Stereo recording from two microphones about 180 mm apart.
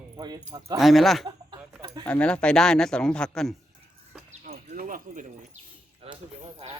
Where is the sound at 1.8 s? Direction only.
30° right (ahead or behind).